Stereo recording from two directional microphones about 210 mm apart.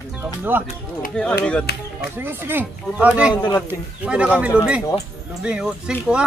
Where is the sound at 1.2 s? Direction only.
5° left (ahead or behind).